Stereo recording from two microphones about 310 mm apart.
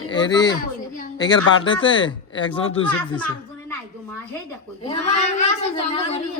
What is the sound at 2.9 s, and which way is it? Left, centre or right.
Speech, centre.